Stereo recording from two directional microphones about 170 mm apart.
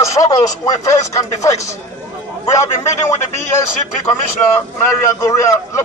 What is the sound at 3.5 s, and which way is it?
A man's voice, 15° left (ahead or behind).